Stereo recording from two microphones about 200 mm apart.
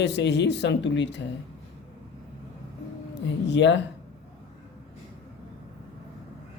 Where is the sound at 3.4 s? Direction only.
65° left (ahead or behind).